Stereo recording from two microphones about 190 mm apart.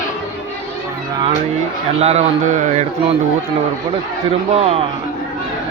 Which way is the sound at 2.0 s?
35° right (ahead or behind).